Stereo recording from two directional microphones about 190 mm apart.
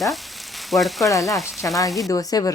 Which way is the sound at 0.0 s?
Centre (ahead or behind).